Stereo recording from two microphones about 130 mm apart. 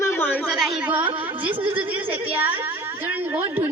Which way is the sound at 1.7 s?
15° right (ahead or behind).